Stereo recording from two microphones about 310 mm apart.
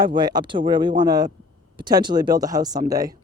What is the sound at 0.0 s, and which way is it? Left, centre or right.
Speech, centre.